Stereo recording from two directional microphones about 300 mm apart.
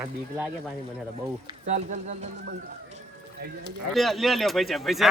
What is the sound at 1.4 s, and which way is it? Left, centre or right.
Speech, right.